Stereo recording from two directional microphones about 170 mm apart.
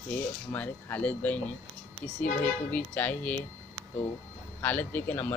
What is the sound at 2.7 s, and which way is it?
Speech, 10° left (ahead or behind).